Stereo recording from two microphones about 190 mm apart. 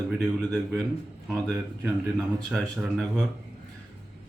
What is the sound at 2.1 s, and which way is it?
Speech, centre (ahead or behind).